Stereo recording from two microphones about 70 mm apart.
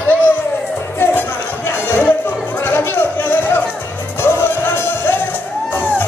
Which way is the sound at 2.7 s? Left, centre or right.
Left.